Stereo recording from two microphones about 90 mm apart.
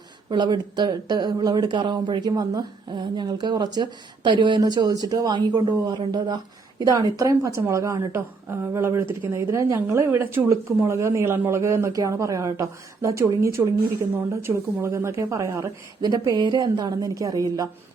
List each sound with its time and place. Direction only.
0.3 s speech: 55° right (ahead or behind); by 15.7 s 35° right (ahead or behind)
16.0 s speech: 45° right (ahead or behind)